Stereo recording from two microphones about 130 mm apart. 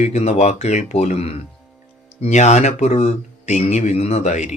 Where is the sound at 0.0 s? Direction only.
60° left (ahead or behind).